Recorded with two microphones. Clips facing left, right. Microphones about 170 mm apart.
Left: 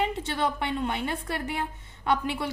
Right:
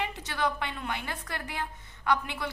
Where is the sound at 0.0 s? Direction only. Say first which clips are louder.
Left 4 dB; 25° left (ahead or behind).